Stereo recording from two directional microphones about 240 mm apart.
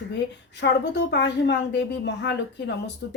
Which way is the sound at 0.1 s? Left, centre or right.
Left.